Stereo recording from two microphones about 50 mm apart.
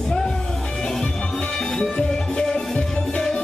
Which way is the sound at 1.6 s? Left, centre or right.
Centre.